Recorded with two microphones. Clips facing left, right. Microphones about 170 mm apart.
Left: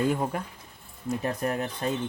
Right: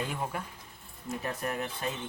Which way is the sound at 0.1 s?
40° left (ahead or behind).